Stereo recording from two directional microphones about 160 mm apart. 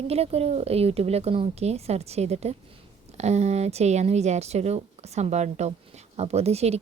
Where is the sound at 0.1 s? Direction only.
40° right (ahead or behind).